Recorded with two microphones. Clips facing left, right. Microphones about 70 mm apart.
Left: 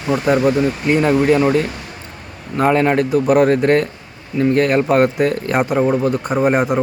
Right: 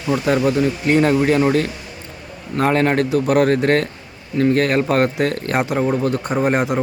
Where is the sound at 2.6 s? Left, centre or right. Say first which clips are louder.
Left 2 dB; centre.